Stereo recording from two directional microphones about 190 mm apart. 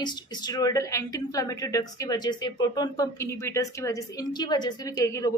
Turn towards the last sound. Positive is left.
turn(degrees=15)  # may be behind; listen again after turning